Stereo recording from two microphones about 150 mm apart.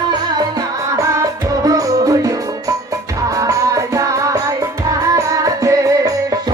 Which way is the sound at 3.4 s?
20° right (ahead or behind).